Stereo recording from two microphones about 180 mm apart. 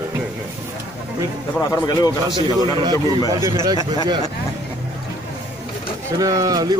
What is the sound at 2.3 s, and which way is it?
Speech, 25° right (ahead or behind).